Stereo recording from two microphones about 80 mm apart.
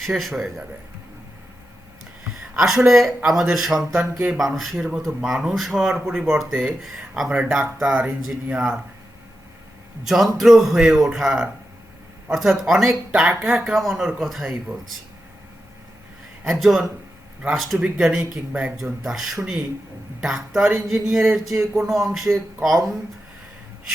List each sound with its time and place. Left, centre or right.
0.0 s speech: centre
2.6 s speech: centre
6.5 s speech: centre
10.0 s speech: centre
16.4 s speech: centre
17.7 s speech: centre
18.8 s speech: centre